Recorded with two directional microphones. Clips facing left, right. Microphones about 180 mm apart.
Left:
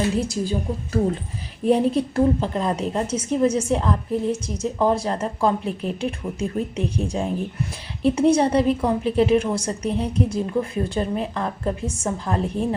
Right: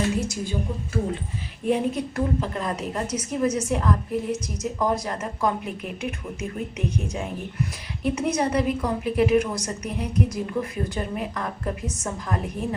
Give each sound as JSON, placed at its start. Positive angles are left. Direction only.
{"t": 0.2, "sound": "a woman's voice", "side_deg": 35}
{"t": 1.6, "sound": "a woman's voice", "side_deg": 35}